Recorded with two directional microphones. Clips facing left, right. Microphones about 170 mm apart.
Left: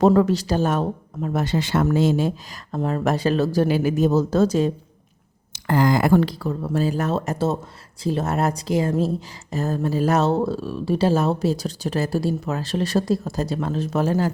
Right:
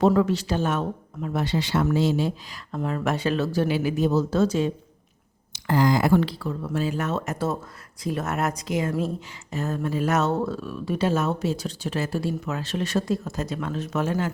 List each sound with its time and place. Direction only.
0.0 s speech: 40° left (ahead or behind)
2.7 s speech: 40° left (ahead or behind)
5.5 s speech: 55° left (ahead or behind); by 14.3 s 35° left (ahead or behind)